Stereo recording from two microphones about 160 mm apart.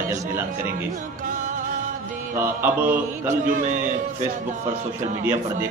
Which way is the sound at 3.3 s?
50° right (ahead or behind).